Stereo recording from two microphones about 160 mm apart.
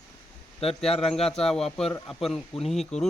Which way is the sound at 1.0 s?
Centre (ahead or behind).